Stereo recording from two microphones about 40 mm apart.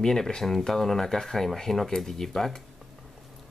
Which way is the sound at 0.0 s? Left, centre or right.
Centre.